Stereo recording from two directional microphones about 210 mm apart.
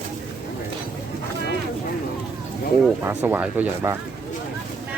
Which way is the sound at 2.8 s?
10° right (ahead or behind).